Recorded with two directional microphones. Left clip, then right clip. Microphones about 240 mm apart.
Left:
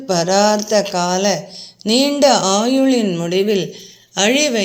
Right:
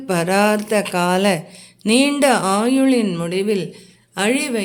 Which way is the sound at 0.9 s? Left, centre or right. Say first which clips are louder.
Even; right.